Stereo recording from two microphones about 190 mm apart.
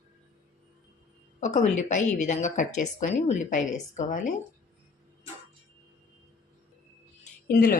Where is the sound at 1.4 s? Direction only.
40° left (ahead or behind).